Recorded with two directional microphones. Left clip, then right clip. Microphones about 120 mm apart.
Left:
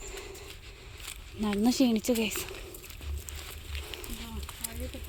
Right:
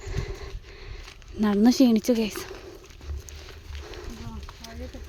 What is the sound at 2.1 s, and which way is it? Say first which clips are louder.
Speech: right 3 dB; 50° right (ahead or behind).